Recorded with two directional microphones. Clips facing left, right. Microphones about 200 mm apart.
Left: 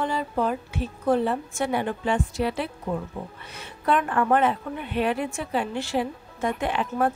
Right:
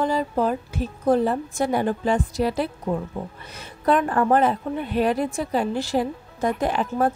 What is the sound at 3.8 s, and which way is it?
A woman's voice, 35° right (ahead or behind).